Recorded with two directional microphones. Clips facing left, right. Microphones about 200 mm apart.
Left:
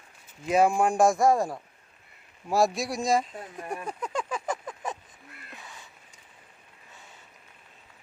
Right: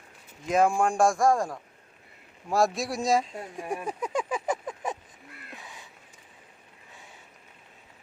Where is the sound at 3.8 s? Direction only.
15° right (ahead or behind).